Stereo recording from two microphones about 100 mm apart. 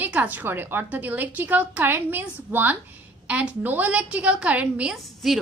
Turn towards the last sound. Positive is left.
turn(degrees=-10)  # may be behind; listen again after turning